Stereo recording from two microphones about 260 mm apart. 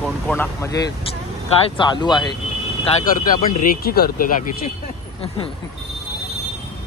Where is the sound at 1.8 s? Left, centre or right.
Centre.